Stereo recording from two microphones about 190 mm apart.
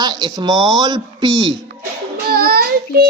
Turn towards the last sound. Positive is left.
turn(degrees=-50)  # may be behind; listen again after turning